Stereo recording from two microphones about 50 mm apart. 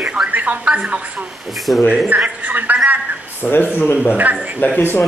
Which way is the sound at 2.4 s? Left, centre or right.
Right.